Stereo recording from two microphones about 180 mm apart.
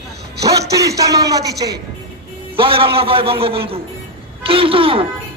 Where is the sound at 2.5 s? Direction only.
30° right (ahead or behind).